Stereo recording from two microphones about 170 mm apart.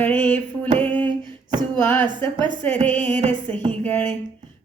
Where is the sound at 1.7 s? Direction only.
10° left (ahead or behind).